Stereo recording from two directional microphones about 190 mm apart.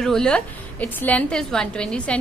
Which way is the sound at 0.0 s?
5° left (ahead or behind).